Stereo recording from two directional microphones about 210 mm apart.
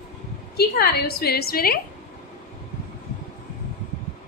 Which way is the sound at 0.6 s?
50° left (ahead or behind).